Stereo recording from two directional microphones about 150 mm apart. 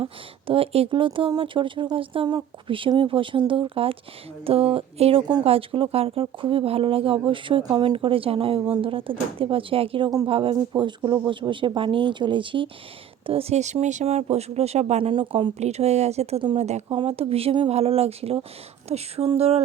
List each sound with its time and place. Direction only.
0.0 s speech: 35° right (ahead or behind)
15.1 s speech: 35° right (ahead or behind)